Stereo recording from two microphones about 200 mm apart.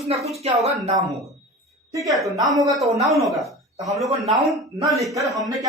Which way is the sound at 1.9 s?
15° right (ahead or behind).